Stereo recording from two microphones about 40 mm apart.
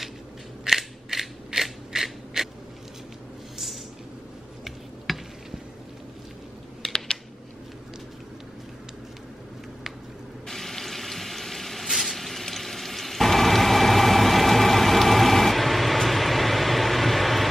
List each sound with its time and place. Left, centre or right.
0.7 s scissors: centre
4.6 s a sound: centre
6.8 s typing: centre
10.5 s water: centre